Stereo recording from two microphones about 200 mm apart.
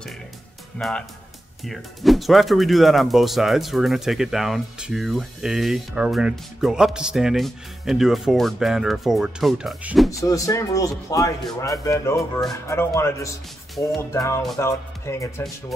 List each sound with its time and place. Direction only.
0.7 s speech: centre (ahead or behind)
10.2 s a man's voice: 15° left (ahead or behind)
12.2 s speech: centre (ahead or behind)
12.6 s a man's voice: 15° left (ahead or behind)